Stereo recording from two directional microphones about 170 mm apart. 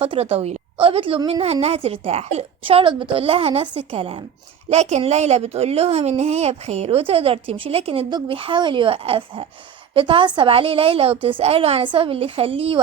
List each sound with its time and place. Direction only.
0.0 s a woman's voice: 35° right (ahead or behind)